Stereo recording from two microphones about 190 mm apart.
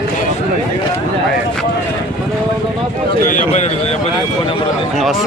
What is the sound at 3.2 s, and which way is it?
Speech, 40° left (ahead or behind).